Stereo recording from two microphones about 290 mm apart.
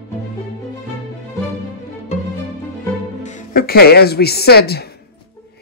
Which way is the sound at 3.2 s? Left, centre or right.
Left.